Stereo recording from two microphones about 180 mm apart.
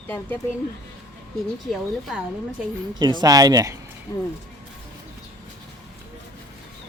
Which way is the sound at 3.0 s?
25° right (ahead or behind).